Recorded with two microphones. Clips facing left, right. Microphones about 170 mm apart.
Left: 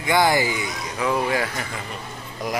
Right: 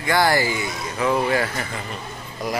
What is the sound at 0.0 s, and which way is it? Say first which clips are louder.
Speech: even; 20° left (ahead or behind).